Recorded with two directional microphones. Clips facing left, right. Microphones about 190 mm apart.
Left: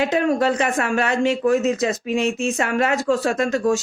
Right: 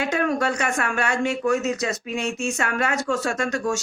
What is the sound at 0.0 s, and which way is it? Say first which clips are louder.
A woman's voice: left 4 dB; 25° left (ahead or behind).